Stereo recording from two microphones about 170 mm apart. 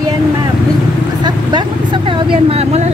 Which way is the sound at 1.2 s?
25° right (ahead or behind).